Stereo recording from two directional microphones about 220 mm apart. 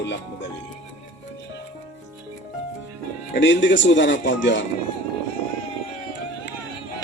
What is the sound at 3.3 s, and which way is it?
Speech, 55° left (ahead or behind).